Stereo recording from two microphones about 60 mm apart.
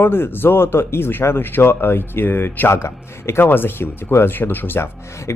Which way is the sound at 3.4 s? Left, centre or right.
Left.